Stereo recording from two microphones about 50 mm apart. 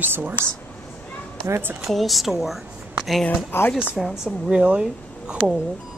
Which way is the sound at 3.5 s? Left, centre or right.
Left.